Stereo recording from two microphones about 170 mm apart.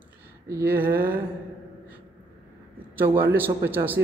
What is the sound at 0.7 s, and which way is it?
Speech, 60° right (ahead or behind).